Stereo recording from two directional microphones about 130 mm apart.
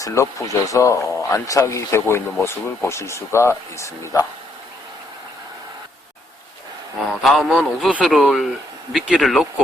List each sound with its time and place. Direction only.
0.0 s speech: 25° left (ahead or behind)
7.2 s speech: centre (ahead or behind)